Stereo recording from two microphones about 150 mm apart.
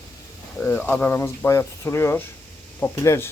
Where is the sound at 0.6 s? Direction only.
10° left (ahead or behind).